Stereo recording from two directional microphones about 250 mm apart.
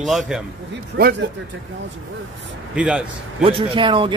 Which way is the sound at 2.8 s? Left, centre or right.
Centre.